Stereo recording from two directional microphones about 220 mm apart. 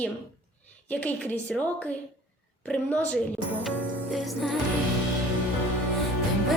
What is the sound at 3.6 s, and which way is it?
Music, centre (ahead or behind).